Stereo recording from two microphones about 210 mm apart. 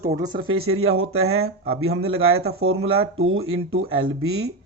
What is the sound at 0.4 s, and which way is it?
Speech, 85° right.